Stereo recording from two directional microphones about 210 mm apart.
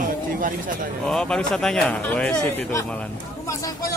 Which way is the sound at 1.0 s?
5° left (ahead or behind).